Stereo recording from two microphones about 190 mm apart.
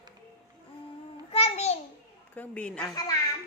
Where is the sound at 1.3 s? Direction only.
30° left (ahead or behind).